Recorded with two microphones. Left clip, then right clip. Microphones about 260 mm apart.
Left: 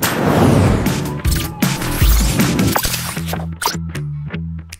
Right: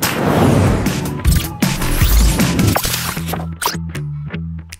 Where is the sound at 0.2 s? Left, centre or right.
Centre.